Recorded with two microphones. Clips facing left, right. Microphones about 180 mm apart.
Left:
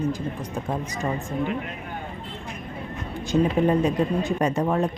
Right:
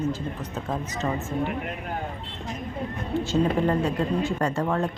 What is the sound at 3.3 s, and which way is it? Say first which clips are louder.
Speech: left 3 dB; 15° left (ahead or behind).